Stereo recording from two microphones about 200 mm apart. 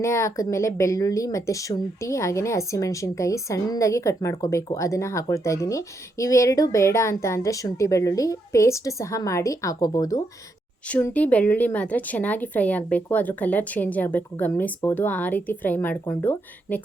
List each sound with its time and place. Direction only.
0.0 s speech: 15° left (ahead or behind)
10.8 s speech: 5° left (ahead or behind)